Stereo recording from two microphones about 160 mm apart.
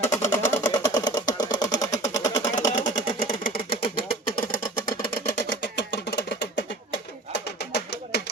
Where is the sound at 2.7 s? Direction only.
55° left (ahead or behind); by 4.0 s 70° left (ahead or behind).